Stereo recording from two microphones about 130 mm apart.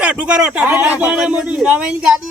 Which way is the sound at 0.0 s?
10° right (ahead or behind).